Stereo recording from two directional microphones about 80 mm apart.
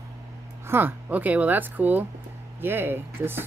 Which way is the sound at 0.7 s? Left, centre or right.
Right.